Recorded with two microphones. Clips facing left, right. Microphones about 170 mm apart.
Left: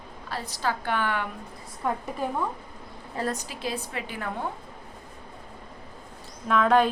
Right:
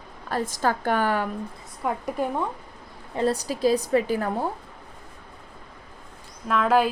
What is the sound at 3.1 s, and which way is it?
A woman's voice, 30° right (ahead or behind).